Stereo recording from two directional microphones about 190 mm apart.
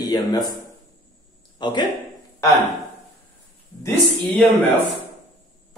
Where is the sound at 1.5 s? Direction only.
25° left (ahead or behind).